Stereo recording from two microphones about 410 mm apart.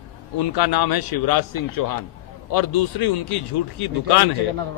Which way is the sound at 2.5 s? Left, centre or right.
Left.